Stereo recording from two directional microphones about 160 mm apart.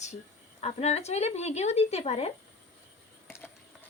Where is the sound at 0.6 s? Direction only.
40° left (ahead or behind).